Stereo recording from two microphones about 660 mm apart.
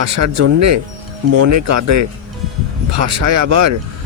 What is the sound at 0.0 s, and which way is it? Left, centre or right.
Speech, right.